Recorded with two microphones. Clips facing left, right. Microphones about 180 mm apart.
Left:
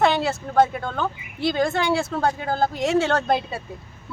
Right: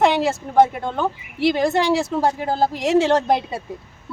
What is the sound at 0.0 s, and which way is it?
A woman's voice, 20° right (ahead or behind).